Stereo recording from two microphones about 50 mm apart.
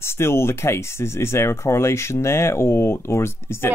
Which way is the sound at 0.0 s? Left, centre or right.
Left.